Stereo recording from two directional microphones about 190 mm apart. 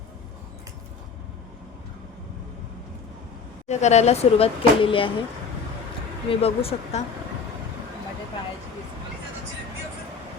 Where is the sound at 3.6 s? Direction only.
35° left (ahead or behind).